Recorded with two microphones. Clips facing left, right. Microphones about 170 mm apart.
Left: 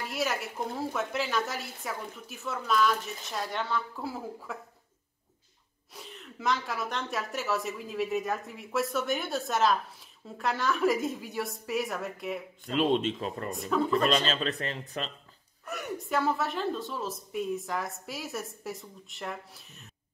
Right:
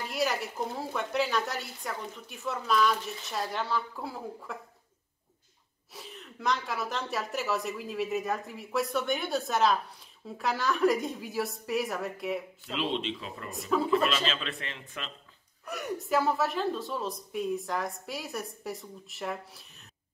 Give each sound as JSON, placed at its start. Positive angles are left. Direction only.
{"t": 0.0, "sound": "a woman's voice", "side_deg": 0}
{"t": 5.9, "sound": "a woman's voice", "side_deg": 0}
{"t": 12.7, "sound": "speech", "side_deg": 45}
{"t": 13.5, "sound": "a woman's voice", "side_deg": 0}
{"t": 14.1, "sound": "a man's voice", "side_deg": 40}
{"t": 15.6, "sound": "a woman's voice", "side_deg": 0}